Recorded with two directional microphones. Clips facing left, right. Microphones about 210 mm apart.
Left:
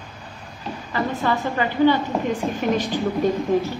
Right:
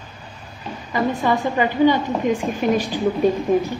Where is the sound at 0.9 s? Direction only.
15° right (ahead or behind).